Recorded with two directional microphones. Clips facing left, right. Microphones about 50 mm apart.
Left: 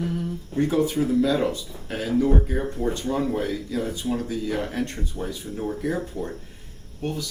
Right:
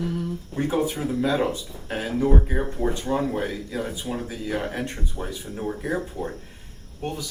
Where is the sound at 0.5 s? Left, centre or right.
Centre.